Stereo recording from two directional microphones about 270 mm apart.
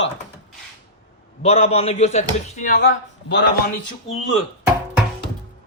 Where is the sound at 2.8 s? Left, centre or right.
Left.